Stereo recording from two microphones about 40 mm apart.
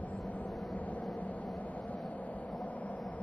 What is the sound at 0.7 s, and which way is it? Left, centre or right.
Vehicle, left.